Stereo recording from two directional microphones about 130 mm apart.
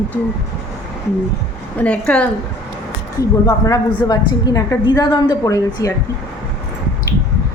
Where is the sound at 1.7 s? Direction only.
10° left (ahead or behind).